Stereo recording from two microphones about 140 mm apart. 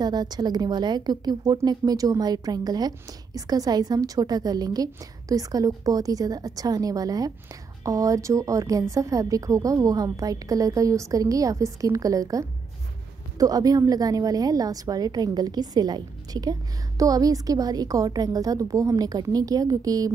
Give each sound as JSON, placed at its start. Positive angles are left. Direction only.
{"t": 0.0, "sound": "a woman's voice", "side_deg": -30}